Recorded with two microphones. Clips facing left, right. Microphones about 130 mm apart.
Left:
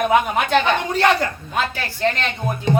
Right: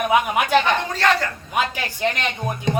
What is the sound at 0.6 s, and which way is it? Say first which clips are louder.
Speech: left 2 dB; 15° left (ahead or behind).